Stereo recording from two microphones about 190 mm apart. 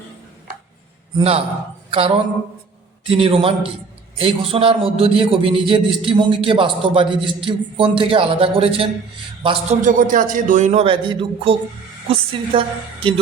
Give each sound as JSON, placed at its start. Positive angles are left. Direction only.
{"t": 1.1, "sound": "a man's voice", "side_deg": -30}
{"t": 1.9, "sound": "a sound", "side_deg": -30}
{"t": 3.1, "sound": "a man's voice", "side_deg": -30}
{"t": 9.8, "sound": "a man's voice", "side_deg": -45}